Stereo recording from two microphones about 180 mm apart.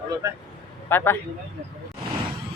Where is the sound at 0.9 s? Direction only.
10° left (ahead or behind).